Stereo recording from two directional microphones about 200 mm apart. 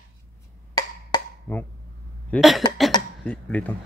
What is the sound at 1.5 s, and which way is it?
Speech, 10° left (ahead or behind).